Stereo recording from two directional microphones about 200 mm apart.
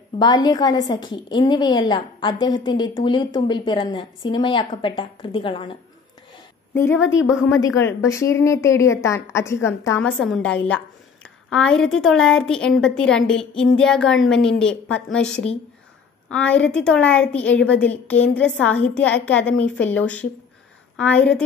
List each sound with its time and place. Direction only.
0.2 s a woman's voice: 20° left (ahead or behind)
6.7 s a woman's voice: 10° left (ahead or behind)
7.0 s a woman's voice: 70° left (ahead or behind)
7.4 s a woman's voice: 15° left (ahead or behind)